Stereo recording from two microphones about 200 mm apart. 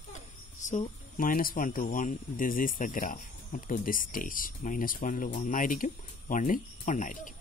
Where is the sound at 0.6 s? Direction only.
40° left (ahead or behind).